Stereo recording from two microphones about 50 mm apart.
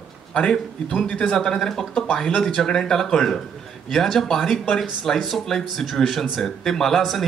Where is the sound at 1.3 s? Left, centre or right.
Centre.